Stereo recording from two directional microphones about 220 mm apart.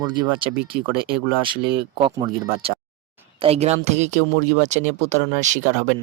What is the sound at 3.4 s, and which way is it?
Speech, 30° right (ahead or behind).